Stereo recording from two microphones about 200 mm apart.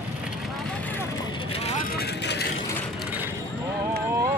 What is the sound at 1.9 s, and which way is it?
Vehicle, 55° left (ahead or behind).